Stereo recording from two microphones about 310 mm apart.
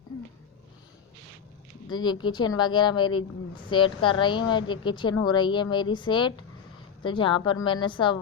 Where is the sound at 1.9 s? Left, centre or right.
Centre.